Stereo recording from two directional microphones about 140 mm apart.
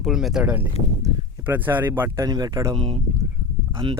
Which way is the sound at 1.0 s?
25° right (ahead or behind).